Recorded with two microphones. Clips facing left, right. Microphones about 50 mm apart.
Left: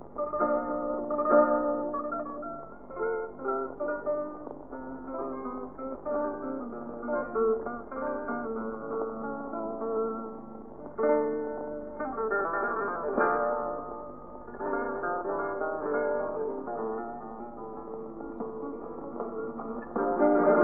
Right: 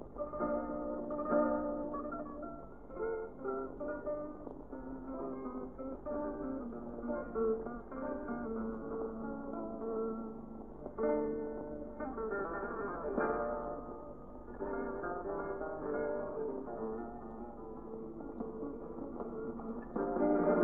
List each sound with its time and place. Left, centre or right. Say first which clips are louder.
0.2 s music: left 9 dB; left
19.1 s music: left 8 dB; left